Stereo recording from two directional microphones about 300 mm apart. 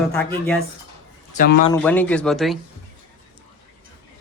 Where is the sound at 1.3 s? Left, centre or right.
Left.